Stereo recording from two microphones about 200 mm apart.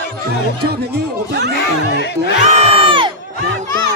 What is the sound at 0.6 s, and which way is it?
Speech, 55° right (ahead or behind).